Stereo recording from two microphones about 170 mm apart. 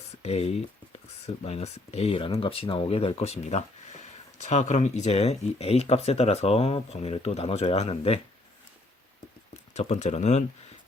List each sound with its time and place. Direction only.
0.2 s a sound: 35° left (ahead or behind)
1.5 s speech: 40° left (ahead or behind)
9.7 s speech: 40° left (ahead or behind)